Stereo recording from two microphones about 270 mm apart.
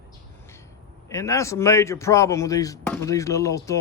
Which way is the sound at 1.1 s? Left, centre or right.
Centre.